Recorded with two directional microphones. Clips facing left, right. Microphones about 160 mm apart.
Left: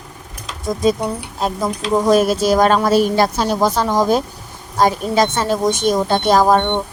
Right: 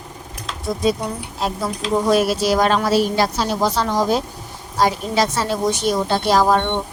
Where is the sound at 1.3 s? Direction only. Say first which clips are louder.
Left 2 dB; 45° left (ahead or behind).